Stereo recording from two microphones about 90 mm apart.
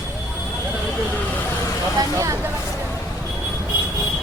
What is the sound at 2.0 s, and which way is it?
Vehicle, 35° right (ahead or behind).